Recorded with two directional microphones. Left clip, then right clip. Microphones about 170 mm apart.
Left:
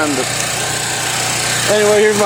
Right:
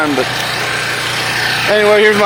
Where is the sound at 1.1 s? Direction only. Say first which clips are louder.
Right 2 dB; 55° left (ahead or behind).